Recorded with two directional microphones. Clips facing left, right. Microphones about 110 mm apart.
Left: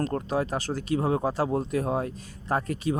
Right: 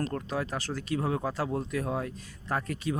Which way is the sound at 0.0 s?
30° left (ahead or behind).